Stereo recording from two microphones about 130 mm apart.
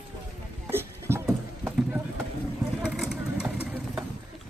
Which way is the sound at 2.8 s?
5° right (ahead or behind).